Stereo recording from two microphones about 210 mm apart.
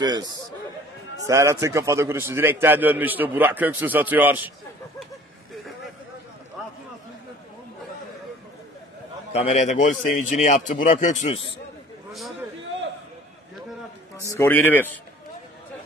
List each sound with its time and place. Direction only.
0.0 s a man's voice: 20° right (ahead or behind)
9.3 s a man's voice: 30° left (ahead or behind)
14.2 s a man's voice: 10° left (ahead or behind)